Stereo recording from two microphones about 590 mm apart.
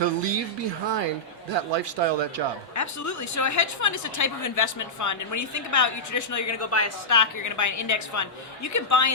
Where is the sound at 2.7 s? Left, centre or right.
Left.